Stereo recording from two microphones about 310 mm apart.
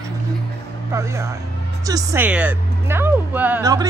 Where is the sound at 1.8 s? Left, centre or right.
Centre.